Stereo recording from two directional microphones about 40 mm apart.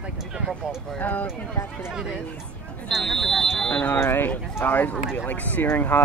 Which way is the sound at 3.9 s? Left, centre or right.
Left.